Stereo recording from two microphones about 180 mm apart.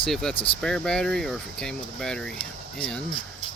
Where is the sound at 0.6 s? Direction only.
5° left (ahead or behind).